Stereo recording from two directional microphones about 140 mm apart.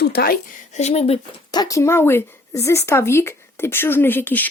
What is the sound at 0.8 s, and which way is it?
Speech, 50° left (ahead or behind).